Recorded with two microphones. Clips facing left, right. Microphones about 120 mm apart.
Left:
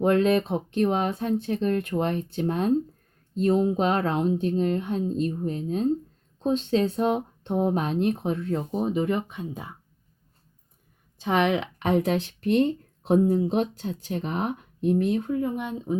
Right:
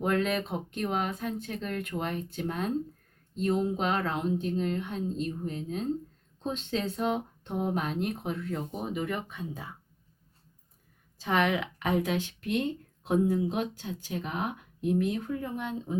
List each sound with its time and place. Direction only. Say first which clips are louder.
0.0 s speech: left 7 dB; 35° left (ahead or behind); by 9.7 s 20° left (ahead or behind)
11.2 s speech: left 4 dB; 20° left (ahead or behind)
15.4 s speech: left 6 dB; 15° left (ahead or behind)